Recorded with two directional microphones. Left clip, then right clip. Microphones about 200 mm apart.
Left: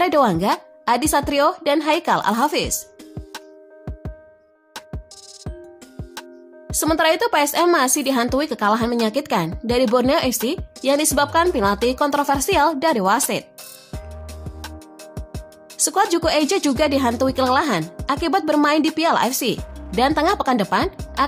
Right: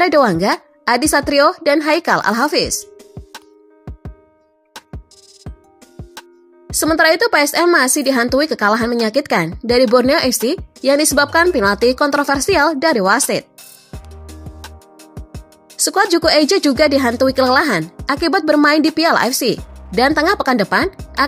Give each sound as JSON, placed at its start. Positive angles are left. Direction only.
{"t": 0.0, "sound": "speech", "side_deg": -15}
{"t": 2.8, "sound": "music", "side_deg": 0}
{"t": 6.8, "sound": "a woman's voice", "side_deg": -15}
{"t": 15.8, "sound": "speech", "side_deg": -20}
{"t": 20.9, "sound": "music", "side_deg": 10}